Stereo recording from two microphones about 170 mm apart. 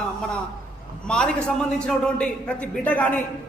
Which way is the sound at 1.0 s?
5° left (ahead or behind).